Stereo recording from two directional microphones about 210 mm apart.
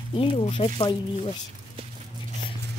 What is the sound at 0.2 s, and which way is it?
Speech, 25° left (ahead or behind).